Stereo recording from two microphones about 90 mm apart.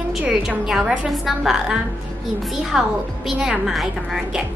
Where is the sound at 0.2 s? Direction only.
5° right (ahead or behind).